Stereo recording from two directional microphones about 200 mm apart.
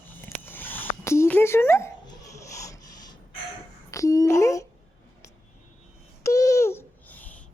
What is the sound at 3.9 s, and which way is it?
Speech, 15° left (ahead or behind).